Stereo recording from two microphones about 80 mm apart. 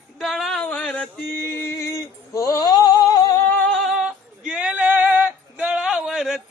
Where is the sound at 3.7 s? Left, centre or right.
Centre; by 5.7 s right.